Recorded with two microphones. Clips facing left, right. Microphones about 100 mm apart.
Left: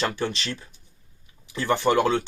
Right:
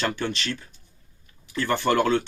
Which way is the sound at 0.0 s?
30° left (ahead or behind).